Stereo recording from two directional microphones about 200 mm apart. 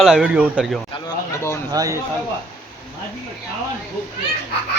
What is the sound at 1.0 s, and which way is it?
Speech, 15° left (ahead or behind).